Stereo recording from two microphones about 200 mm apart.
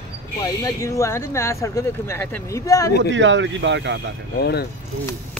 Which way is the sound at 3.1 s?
65° right (ahead or behind).